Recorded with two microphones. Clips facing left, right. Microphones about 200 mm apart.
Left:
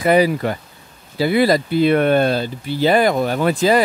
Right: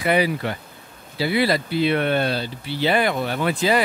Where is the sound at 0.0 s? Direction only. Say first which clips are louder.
Left 5 dB; 40° left (ahead or behind).